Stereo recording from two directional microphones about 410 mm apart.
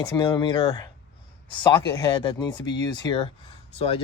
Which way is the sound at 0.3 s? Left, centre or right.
Centre.